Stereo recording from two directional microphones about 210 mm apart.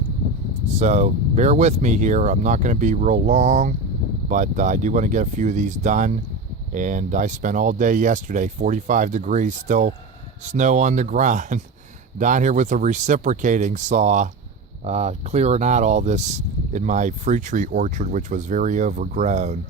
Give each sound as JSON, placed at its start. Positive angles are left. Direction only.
{"t": 0.8, "sound": "speech", "side_deg": -35}